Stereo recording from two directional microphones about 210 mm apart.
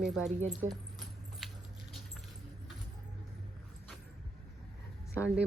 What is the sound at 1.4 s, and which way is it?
Rodents, centre (ahead or behind).